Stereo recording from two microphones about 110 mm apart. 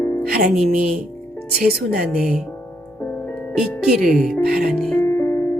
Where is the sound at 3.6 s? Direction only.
5° right (ahead or behind).